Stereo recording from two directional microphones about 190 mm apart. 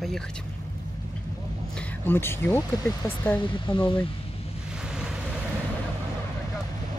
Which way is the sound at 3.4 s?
25° left (ahead or behind).